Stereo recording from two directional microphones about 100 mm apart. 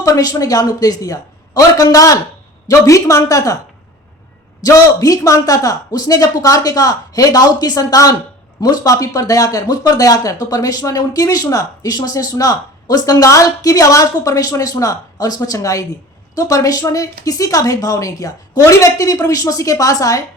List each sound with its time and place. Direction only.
0.0 s speech: 40° left (ahead or behind)
4.6 s speech: 35° left (ahead or behind)